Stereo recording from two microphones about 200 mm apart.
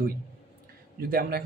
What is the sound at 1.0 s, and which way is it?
Speech, 45° right (ahead or behind).